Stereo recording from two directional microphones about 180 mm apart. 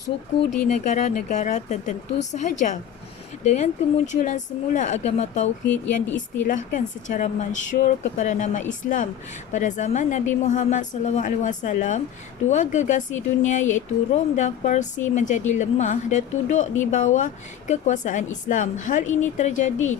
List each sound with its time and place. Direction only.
0.7 s a woman's voice: 45° left (ahead or behind)
5.6 s speech: 10° left (ahead or behind)
6.5 s a woman's voice: 45° left (ahead or behind)